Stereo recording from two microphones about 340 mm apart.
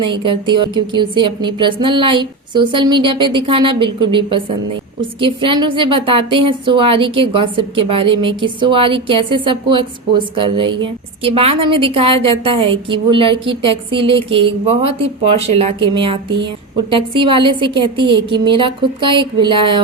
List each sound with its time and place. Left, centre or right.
0.3 s a woman's voice: centre